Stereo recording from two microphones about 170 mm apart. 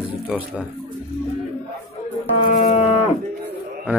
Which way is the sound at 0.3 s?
5° right (ahead or behind).